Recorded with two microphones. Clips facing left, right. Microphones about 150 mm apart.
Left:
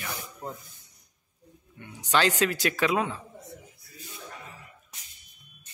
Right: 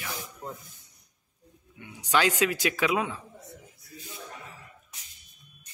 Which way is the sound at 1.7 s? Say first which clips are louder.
Even; 10° right (ahead or behind).